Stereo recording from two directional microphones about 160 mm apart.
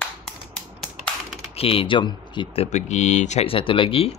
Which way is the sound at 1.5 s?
35° left (ahead or behind).